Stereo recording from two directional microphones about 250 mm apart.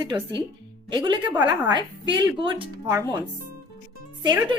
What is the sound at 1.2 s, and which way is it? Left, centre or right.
Speech, centre.